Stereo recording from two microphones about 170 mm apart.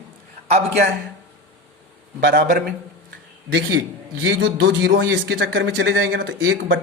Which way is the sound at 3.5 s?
75° right (ahead or behind).